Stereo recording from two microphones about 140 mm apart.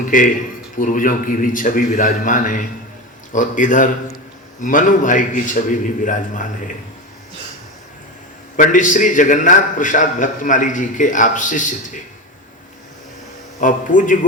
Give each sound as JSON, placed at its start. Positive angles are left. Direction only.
{"t": 0.1, "sound": "a man's voice", "side_deg": 70}
{"t": 8.5, "sound": "a man's voice", "side_deg": 65}
{"t": 13.6, "sound": "a man's voice", "side_deg": 70}